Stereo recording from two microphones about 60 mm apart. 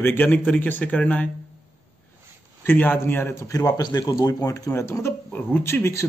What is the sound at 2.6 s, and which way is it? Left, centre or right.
Speech, left.